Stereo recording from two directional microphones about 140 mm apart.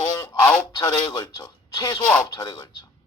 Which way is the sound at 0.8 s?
30° left (ahead or behind).